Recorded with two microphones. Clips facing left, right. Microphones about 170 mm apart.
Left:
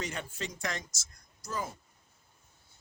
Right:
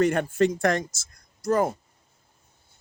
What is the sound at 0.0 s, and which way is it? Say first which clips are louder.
Speech: right 17 dB; 55° right (ahead or behind).